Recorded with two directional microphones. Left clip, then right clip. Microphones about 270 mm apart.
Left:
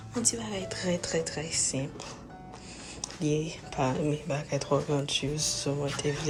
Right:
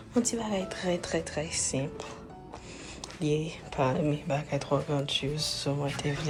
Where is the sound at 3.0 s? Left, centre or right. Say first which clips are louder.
Even; centre.